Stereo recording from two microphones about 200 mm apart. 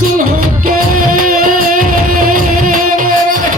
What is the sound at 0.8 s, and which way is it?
Music, 45° right (ahead or behind).